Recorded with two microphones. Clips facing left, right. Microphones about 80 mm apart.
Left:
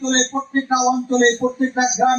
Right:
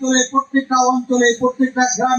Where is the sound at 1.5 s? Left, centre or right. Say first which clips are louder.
Right 2 dB; right.